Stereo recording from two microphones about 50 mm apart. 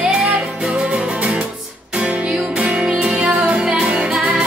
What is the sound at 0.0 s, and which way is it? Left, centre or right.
Music, centre.